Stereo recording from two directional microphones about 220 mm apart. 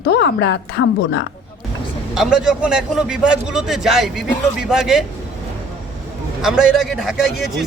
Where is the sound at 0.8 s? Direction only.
65° left (ahead or behind).